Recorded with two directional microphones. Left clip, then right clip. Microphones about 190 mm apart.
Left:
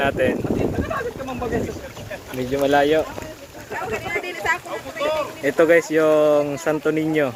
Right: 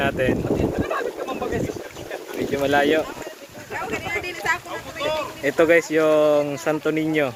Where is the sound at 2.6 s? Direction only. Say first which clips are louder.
Left 2 dB; 10° right (ahead or behind).